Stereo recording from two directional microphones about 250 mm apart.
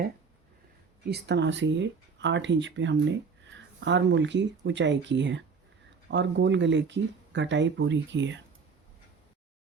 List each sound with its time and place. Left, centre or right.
1.0 s speech: right